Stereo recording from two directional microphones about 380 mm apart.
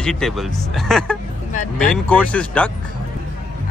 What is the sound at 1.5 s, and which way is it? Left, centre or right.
Speech, centre.